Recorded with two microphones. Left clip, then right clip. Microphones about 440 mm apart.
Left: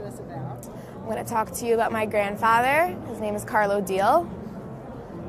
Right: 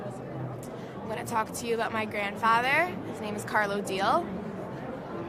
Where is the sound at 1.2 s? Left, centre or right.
Left.